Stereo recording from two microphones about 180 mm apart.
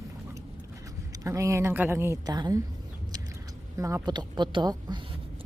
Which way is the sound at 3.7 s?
20° right (ahead or behind).